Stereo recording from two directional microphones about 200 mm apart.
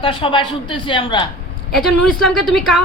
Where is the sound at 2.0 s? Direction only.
5° left (ahead or behind).